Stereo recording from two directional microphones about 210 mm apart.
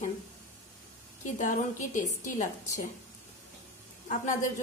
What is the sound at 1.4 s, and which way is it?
Speech, 40° left (ahead or behind).